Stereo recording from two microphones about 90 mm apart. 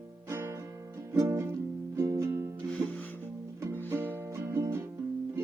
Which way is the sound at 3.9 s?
20° right (ahead or behind).